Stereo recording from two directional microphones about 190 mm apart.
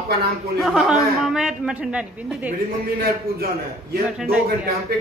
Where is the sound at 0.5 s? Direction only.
Centre (ahead or behind).